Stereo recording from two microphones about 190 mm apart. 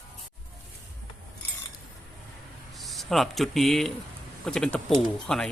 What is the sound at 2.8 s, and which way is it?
Speech, centre (ahead or behind).